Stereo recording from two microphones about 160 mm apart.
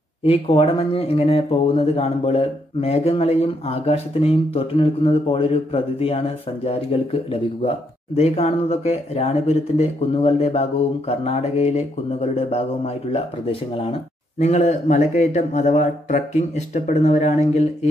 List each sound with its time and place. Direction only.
0.2 s speech: 40° left (ahead or behind)
8.2 s speech: 40° left (ahead or behind)